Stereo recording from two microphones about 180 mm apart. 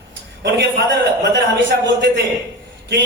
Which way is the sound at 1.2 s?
85° right.